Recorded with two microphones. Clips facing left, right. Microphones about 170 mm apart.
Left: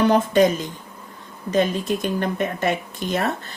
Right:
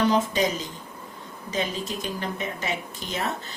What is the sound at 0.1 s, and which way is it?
Speech, 55° left (ahead or behind).